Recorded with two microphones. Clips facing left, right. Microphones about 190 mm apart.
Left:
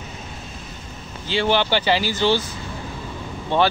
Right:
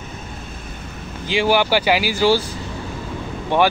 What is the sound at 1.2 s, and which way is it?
Speech, 10° right (ahead or behind).